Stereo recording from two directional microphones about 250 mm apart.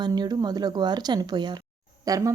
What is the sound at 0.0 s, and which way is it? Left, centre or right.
Speech, centre.